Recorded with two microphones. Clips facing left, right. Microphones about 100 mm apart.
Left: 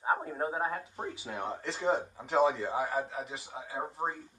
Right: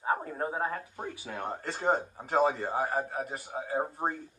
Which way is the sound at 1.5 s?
40° right (ahead or behind).